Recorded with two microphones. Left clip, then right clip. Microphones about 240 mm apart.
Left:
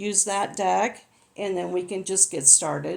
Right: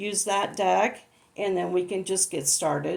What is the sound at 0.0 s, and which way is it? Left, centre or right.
Speech, left.